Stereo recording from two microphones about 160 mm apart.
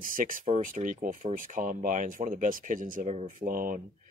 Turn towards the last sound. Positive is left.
turn(degrees=-60)  # may be behind; listen again after turning